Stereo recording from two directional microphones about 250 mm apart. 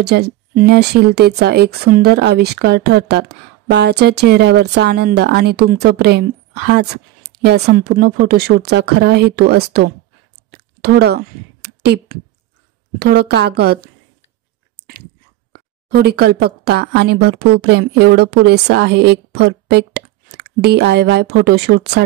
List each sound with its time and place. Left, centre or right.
0.0 s speech: right
10.5 s a sound: right
13.0 s speech: right
15.5 s a woman's voice: right